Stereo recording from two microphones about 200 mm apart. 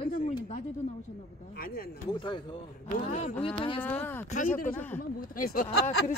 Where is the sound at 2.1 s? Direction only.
25° left (ahead or behind).